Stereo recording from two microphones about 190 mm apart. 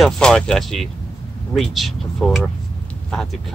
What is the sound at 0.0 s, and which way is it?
Speech, 5° left (ahead or behind).